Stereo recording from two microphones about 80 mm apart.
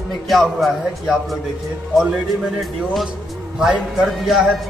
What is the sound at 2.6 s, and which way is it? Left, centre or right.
Speech, centre.